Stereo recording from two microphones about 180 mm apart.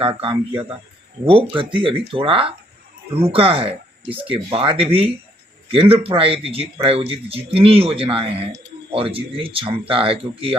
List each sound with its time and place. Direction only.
0.0 s speech: 30° right (ahead or behind)